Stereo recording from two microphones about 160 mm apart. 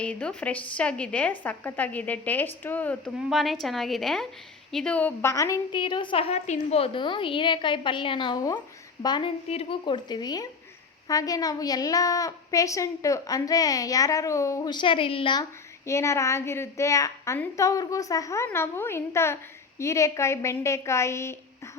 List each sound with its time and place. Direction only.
0.0 s a woman's voice: 5° left (ahead or behind)
3.2 s a woman's voice: centre (ahead or behind); by 15.4 s 30° left (ahead or behind)
15.9 s a woman's voice: 20° left (ahead or behind)